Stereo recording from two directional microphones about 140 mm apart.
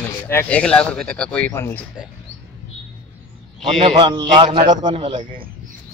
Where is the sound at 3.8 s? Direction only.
35° right (ahead or behind).